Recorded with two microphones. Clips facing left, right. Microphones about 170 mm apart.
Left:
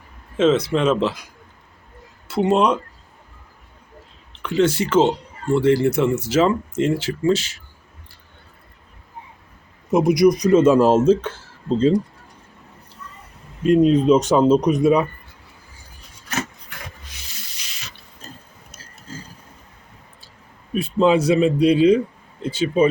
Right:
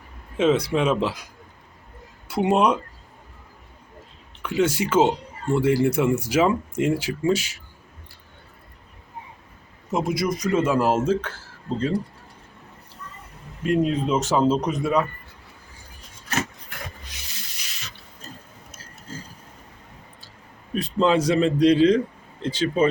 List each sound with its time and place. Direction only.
0.3 s speech: 10° right (ahead or behind)
2.2 s speech: 10° right (ahead or behind)
4.4 s speech: 10° right (ahead or behind)
9.9 s speech: 15° left (ahead or behind)
13.7 s speech: 20° left (ahead or behind)
20.7 s a sound: 10° left (ahead or behind)
21.2 s a man's voice: 10° left (ahead or behind)